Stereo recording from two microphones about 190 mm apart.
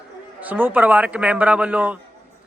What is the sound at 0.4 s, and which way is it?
A man's voice, 10° right (ahead or behind).